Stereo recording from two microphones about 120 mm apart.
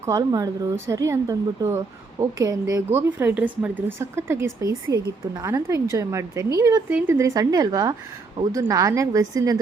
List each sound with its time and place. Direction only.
0.0 s speech: 30° right (ahead or behind)